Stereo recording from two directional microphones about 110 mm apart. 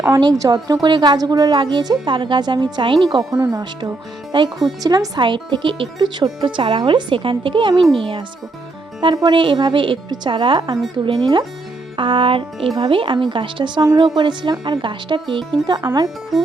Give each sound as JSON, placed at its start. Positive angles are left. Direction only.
{"t": 0.1, "sound": "a woman's voice", "side_deg": -35}
{"t": 3.3, "sound": "speech", "side_deg": -25}
{"t": 3.6, "sound": "speech", "side_deg": -40}
{"t": 9.2, "sound": "speech", "side_deg": -45}